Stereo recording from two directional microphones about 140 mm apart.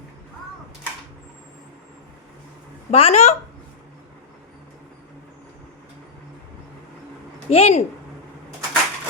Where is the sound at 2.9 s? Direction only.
45° left (ahead or behind).